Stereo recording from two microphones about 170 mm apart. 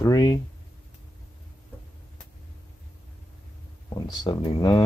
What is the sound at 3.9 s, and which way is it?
Speech, 25° left (ahead or behind).